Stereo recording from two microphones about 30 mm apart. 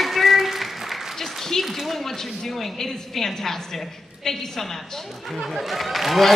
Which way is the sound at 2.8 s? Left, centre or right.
Centre.